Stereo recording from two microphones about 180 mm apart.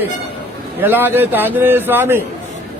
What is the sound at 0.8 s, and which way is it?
A man's voice, 10° right (ahead or behind).